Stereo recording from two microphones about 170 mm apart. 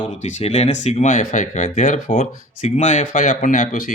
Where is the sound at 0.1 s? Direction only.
45° left (ahead or behind).